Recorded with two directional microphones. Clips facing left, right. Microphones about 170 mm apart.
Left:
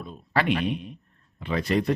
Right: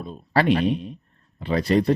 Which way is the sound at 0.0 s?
35° right (ahead or behind).